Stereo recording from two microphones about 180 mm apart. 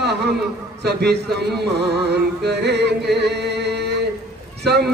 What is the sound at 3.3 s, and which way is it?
Music, 70° right (ahead or behind).